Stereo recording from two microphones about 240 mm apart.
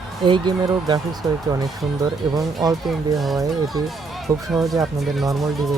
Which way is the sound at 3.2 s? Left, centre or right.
Centre.